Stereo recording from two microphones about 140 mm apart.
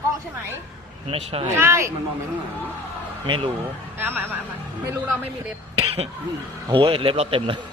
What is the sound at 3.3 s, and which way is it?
Speech, 35° right (ahead or behind).